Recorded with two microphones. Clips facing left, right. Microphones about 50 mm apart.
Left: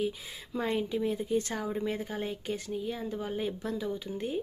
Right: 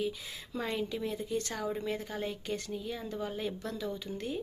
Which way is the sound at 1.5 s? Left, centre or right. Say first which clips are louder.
Left 2 dB; centre.